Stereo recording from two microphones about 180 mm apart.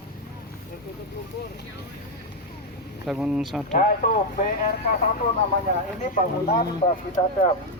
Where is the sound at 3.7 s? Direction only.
50° left (ahead or behind).